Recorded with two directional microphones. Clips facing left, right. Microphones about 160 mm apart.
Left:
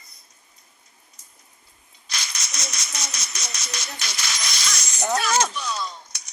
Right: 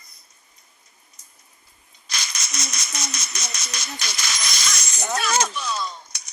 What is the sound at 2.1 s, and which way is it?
Rattle, 50° right (ahead or behind).